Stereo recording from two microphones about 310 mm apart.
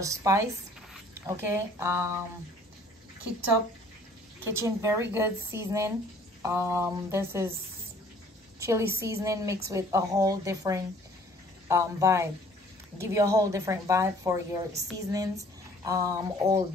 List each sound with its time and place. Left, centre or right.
0.0 s a woman's voice: centre
4.5 s a woman's voice: centre
8.5 s a woman's voice: centre
14.7 s a woman's voice: right
15.0 s speech: centre